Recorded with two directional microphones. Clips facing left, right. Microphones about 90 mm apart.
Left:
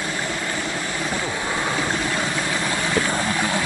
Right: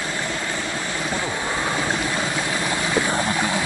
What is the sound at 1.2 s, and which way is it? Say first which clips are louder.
Boat: even; 5° right (ahead or behind).